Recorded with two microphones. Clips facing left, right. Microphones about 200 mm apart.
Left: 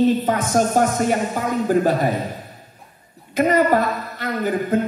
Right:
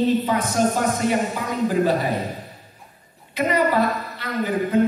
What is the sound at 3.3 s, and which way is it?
A woman's voice, 50° left (ahead or behind).